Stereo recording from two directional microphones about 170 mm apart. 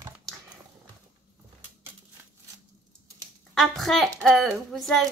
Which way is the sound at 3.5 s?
Centre (ahead or behind).